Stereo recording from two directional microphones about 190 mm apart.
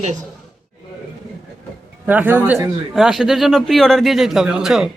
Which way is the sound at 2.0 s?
10° right (ahead or behind).